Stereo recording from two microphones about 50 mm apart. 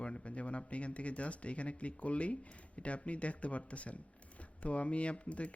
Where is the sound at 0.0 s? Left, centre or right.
Left.